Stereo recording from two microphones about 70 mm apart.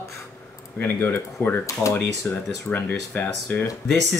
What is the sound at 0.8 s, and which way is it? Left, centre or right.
Speech, left.